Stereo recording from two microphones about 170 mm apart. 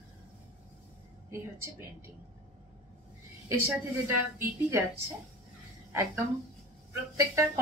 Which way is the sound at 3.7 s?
15° right (ahead or behind).